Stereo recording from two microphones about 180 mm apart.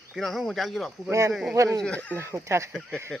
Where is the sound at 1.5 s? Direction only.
15° right (ahead or behind).